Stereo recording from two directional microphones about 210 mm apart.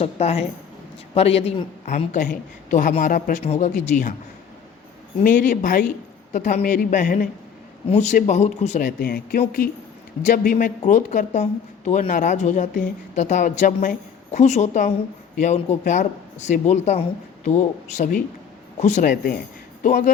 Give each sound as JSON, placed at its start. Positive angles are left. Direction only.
{"t": 0.0, "sound": "a woman's voice", "side_deg": 30}
{"t": 5.2, "sound": "a man's voice", "side_deg": 40}